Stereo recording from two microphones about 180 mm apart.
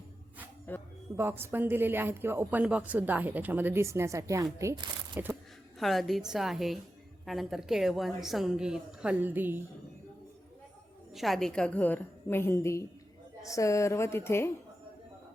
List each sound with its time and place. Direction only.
0.7 s a woman's voice: 10° left (ahead or behind)
1.1 s a woman's voice: 10° right (ahead or behind)
5.8 s a woman's voice: centre (ahead or behind)
11.1 s a woman's voice: centre (ahead or behind)